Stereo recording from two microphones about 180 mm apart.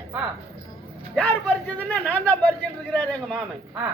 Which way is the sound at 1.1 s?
5° left (ahead or behind).